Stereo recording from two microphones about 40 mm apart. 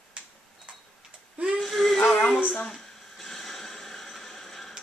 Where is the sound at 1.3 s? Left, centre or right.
Right.